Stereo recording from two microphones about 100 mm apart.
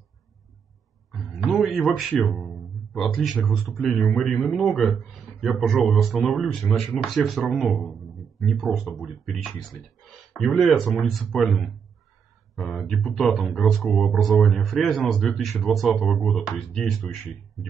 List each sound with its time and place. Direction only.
1.1 s a man's voice: 5° right (ahead or behind)